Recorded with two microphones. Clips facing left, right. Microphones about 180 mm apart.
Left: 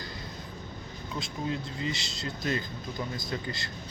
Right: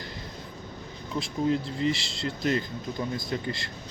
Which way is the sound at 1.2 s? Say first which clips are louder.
Right 8 dB; 30° right (ahead or behind).